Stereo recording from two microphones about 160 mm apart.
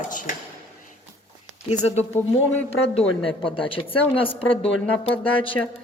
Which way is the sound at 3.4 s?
35° left (ahead or behind).